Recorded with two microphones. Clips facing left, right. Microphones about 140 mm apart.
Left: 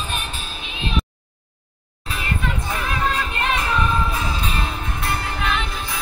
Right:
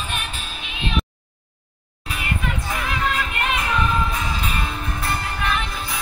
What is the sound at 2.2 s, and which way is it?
Music, 30° left (ahead or behind).